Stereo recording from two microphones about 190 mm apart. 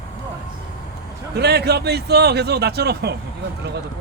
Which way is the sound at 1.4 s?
60° right (ahead or behind).